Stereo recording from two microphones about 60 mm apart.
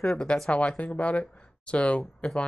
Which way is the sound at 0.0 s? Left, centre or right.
Centre.